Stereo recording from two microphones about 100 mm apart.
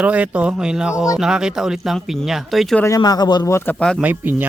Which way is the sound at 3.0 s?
45° left (ahead or behind).